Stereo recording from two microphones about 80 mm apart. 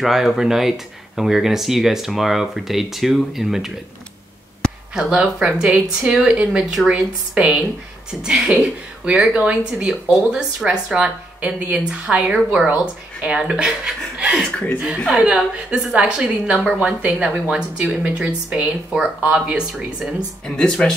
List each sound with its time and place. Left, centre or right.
0.0 s speech: centre
4.9 s a woman's voice: centre
20.4 s speech: centre